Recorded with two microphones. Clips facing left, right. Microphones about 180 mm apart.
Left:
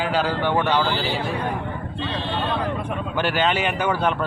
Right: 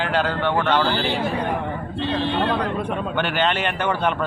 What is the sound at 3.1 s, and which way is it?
A man's voice, 5° left (ahead or behind).